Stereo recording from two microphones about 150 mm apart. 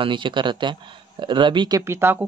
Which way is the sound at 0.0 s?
35° right (ahead or behind).